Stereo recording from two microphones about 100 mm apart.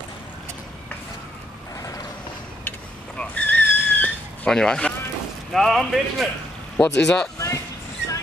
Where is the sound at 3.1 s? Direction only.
15° left (ahead or behind).